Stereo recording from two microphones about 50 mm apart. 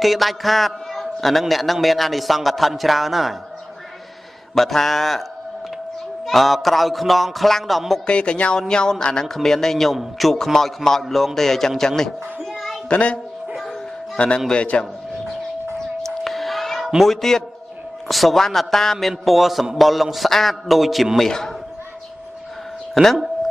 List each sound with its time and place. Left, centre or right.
0.0 s a man's voice: centre
4.6 s a man's voice: centre
6.2 s a man's voice: centre
8.1 s a man's voice: left
12.9 s a man's voice: left
16.3 s a sound: centre
17.0 s a man's voice: centre
23.0 s a man's voice: centre